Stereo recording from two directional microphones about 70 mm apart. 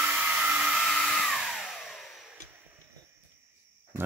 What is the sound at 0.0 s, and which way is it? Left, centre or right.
Hair dryer, right.